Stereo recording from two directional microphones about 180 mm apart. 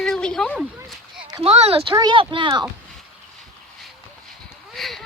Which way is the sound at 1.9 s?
25° right (ahead or behind).